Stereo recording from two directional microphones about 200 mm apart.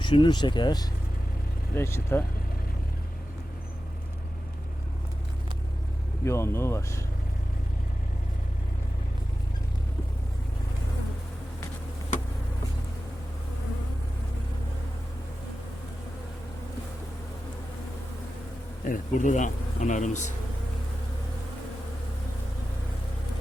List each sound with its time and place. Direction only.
0.0 s speech: 25° left (ahead or behind)
6.2 s speech: 15° left (ahead or behind)
18.9 s speech: 40° left (ahead or behind)